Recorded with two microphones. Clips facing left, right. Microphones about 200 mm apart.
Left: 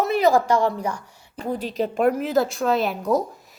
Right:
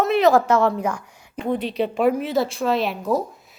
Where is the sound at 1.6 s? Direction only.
40° left (ahead or behind).